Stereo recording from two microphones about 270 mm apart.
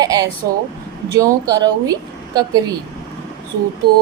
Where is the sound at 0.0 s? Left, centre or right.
Centre.